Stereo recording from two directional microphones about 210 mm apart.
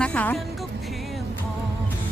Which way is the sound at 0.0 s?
5° left (ahead or behind).